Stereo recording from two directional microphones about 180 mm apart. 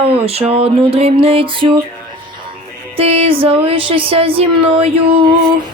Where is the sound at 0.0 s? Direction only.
35° right (ahead or behind).